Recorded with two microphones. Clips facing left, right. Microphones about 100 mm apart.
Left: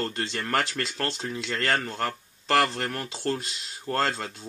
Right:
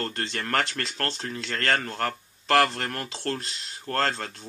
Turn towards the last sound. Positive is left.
turn(degrees=5)  # may be behind; listen again after turning